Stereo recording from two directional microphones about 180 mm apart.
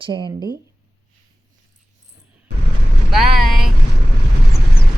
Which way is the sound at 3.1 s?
Centre (ahead or behind).